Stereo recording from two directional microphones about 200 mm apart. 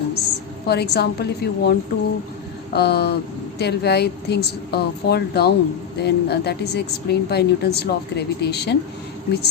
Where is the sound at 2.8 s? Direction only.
55° left (ahead or behind).